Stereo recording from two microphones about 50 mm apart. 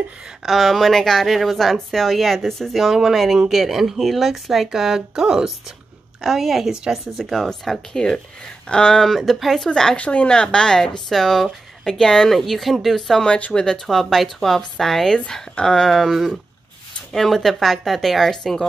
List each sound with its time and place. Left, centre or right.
0.4 s speech: centre
6.7 s speech: centre
7.2 s speech: centre
8.6 s speech: centre
9.0 s speech: centre
9.9 s speech: left
15.9 s speech: centre